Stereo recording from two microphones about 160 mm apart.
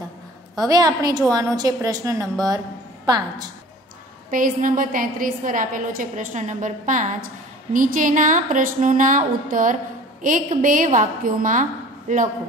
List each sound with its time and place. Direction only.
0.7 s a woman's voice: 25° right (ahead or behind)
4.3 s a woman's voice: 60° right (ahead or behind)